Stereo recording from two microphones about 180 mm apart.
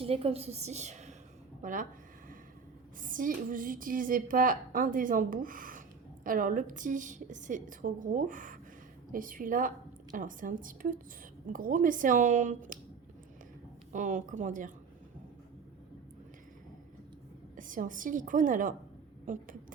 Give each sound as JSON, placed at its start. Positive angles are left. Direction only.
{"t": 0.0, "sound": "a woman's voice", "side_deg": -30}
{"t": 3.0, "sound": "a woman's voice", "side_deg": -50}
{"t": 13.9, "sound": "a woman's voice", "side_deg": -45}
{"t": 17.6, "sound": "a woman's voice", "side_deg": -50}